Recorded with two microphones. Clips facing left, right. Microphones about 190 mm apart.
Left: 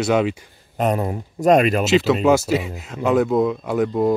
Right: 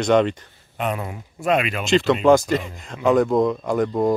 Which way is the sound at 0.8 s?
40° left (ahead or behind).